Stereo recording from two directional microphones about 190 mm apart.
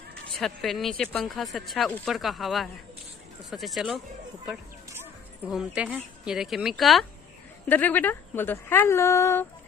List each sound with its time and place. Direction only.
0.4 s speech: centre (ahead or behind)
5.5 s speech: 5° right (ahead or behind); by 9.5 s 15° left (ahead or behind)